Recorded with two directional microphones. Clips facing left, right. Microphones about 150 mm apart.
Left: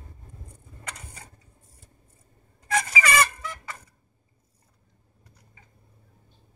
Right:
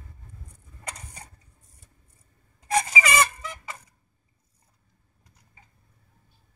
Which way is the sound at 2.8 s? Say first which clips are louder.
Even; 15° right (ahead or behind).